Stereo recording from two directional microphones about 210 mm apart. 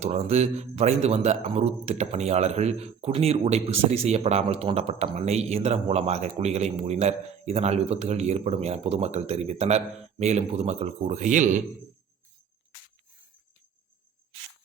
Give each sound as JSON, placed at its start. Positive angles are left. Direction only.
{"t": 0.0, "sound": "a man's voice", "side_deg": -30}